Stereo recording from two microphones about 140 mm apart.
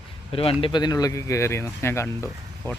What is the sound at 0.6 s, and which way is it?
Speech, 30° left (ahead or behind).